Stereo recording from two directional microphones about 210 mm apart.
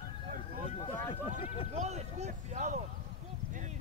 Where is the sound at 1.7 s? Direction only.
30° right (ahead or behind).